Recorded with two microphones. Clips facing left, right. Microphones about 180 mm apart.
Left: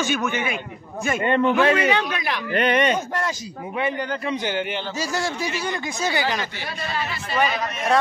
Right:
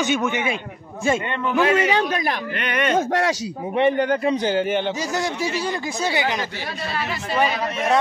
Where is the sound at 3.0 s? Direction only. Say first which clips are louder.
Right 6 dB; 90° right.